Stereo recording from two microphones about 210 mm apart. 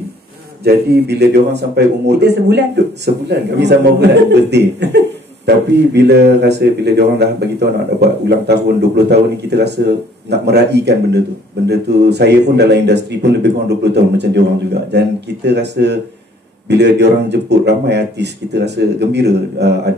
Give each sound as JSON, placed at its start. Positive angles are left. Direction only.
{"t": 0.7, "sound": "speech", "side_deg": -50}